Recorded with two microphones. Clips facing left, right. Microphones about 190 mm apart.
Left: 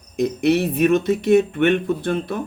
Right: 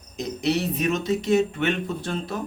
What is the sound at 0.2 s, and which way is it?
Speech, 55° left (ahead or behind).